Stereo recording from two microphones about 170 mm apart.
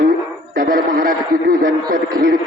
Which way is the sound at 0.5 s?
55° right (ahead or behind).